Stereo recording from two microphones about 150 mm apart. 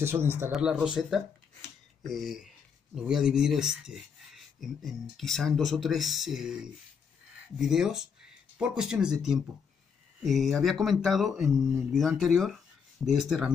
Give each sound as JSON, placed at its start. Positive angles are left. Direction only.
{"t": 0.0, "sound": "speech", "side_deg": -15}
{"t": 0.5, "sound": "speech", "side_deg": -5}
{"t": 2.0, "sound": "speech", "side_deg": 0}